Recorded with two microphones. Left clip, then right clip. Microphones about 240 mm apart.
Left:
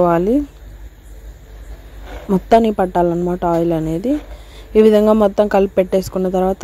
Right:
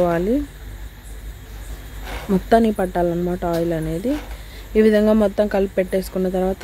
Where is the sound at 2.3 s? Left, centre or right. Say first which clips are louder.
Left 4 dB; centre.